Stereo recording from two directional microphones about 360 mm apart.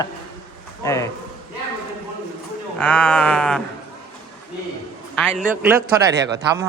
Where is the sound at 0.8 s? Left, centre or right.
Centre.